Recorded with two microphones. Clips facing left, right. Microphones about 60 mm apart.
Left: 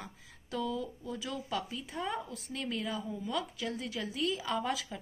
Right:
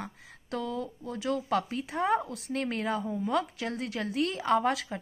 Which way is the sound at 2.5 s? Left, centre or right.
Right.